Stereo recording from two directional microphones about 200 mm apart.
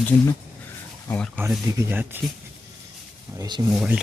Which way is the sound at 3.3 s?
20° right (ahead or behind).